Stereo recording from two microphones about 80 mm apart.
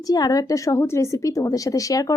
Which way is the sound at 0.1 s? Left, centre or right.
Left.